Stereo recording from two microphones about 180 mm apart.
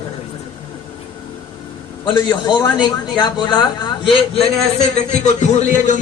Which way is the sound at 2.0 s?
25° left (ahead or behind).